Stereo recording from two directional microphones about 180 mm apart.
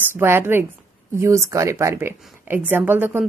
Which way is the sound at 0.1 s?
15° right (ahead or behind).